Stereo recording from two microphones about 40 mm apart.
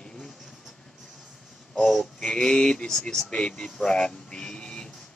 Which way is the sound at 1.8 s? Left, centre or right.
Centre.